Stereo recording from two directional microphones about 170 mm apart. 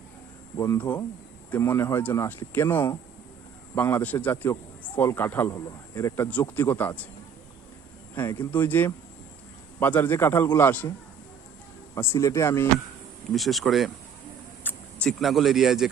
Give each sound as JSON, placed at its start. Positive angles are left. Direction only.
{"t": 0.5, "sound": "a man's voice", "side_deg": 20}
{"t": 8.1, "sound": "a man's voice", "side_deg": 10}
{"t": 11.9, "sound": "a man's voice", "side_deg": 15}
{"t": 13.3, "sound": "speech", "side_deg": 0}
{"t": 14.6, "sound": "a sound", "side_deg": 10}
{"t": 15.0, "sound": "speech", "side_deg": 0}